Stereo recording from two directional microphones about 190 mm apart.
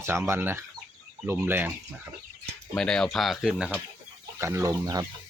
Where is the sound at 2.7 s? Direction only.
5° left (ahead or behind).